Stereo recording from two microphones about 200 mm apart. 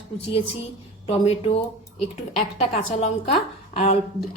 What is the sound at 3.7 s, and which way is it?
Speech, 35° left (ahead or behind).